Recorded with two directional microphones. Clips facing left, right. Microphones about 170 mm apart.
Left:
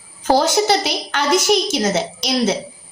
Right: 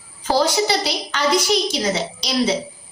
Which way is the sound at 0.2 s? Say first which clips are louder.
Left 3 dB; 50° left (ahead or behind).